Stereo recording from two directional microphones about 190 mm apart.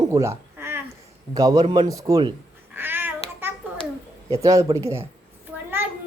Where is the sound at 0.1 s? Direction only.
15° right (ahead or behind).